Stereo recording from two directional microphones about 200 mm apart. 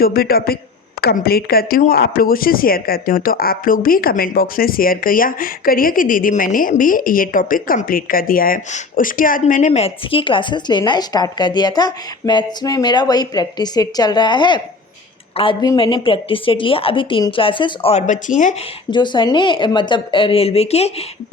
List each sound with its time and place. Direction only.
0.0 s a woman's voice: 50° left (ahead or behind)
18.9 s a woman's voice: 25° left (ahead or behind)